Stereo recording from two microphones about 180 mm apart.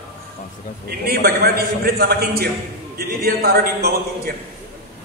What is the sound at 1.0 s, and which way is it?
A man's voice, 60° right (ahead or behind).